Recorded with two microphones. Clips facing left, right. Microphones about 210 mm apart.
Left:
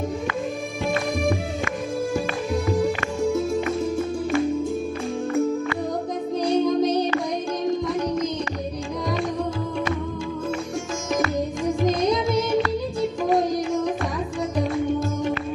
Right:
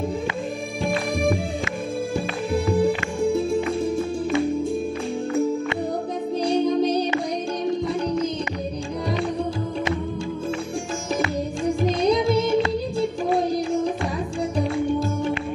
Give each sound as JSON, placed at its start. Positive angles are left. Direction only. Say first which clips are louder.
{"t": 2.1, "sound": "music", "louder": "even", "side_deg": -30}
{"t": 6.4, "sound": "music", "louder": "even", "side_deg": -30}
{"t": 12.1, "sound": "music", "louder": "right 2 dB", "side_deg": -30}